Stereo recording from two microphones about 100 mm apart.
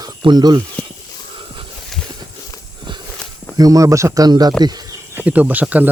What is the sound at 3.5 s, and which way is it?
Speech, 35° right (ahead or behind).